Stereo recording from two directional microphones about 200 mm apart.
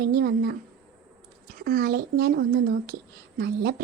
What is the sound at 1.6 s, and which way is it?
Speech, 50° right (ahead or behind).